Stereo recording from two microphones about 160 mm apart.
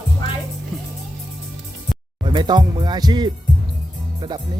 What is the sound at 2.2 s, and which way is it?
Speech, 25° right (ahead or behind).